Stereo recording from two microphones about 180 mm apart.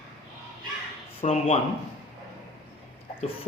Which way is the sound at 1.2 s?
40° left (ahead or behind).